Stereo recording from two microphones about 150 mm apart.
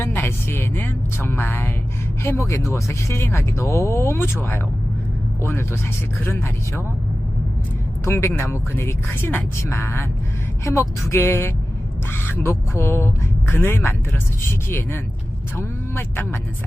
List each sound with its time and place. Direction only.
0.0 s speech: 15° left (ahead or behind)
8.0 s speech: 15° left (ahead or behind)